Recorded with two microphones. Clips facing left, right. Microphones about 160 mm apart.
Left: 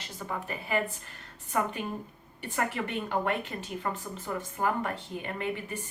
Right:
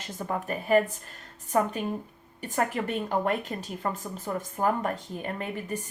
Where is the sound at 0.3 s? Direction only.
45° right (ahead or behind).